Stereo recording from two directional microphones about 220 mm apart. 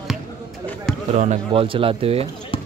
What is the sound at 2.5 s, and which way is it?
Clip-clop, 25° left (ahead or behind).